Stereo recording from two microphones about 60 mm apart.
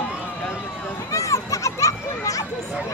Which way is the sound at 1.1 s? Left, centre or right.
Left.